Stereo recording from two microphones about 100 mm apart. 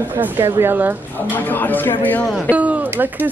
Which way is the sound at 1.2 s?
20° left (ahead or behind).